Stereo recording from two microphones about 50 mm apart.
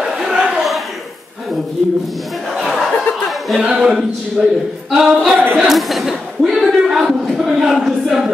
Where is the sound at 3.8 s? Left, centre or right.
Right.